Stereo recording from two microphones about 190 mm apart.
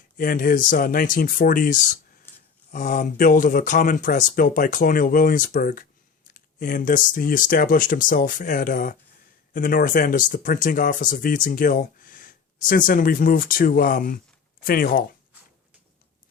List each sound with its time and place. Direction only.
0.2 s speech: 45° left (ahead or behind)